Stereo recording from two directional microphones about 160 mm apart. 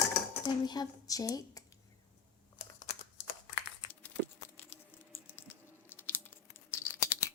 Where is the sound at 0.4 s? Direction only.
25° left (ahead or behind).